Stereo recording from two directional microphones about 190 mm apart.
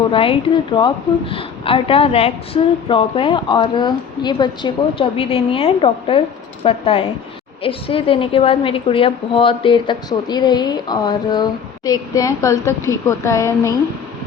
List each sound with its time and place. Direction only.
0.1 s a woman's voice: 25° left (ahead or behind)